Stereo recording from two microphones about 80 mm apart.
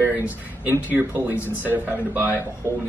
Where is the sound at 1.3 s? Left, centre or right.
Left.